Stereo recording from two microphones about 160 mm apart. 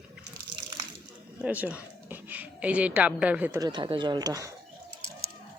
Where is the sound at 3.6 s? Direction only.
25° right (ahead or behind).